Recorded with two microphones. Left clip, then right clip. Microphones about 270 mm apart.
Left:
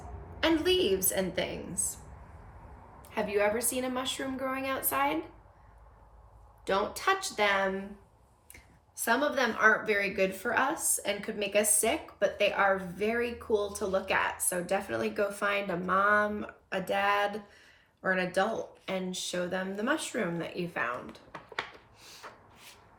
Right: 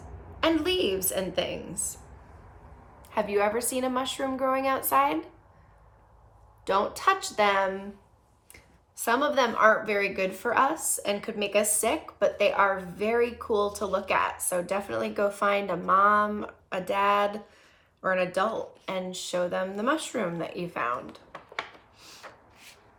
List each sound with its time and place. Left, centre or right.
0.8 s speech: centre
3.0 s speech: centre
6.7 s speech: centre